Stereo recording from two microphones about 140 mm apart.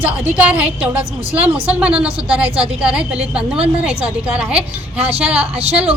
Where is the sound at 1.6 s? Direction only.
10° right (ahead or behind).